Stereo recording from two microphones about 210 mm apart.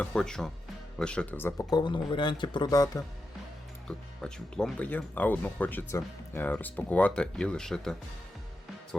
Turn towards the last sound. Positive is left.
turn(degrees=5)  # may be behind; listen again after turning